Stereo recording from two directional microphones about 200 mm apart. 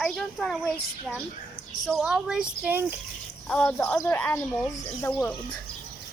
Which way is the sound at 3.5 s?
5° left (ahead or behind).